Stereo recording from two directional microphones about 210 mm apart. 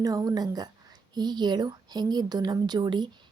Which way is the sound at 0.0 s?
15° right (ahead or behind).